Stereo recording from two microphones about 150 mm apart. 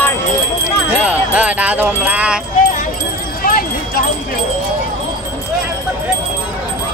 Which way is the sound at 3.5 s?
70° left (ahead or behind).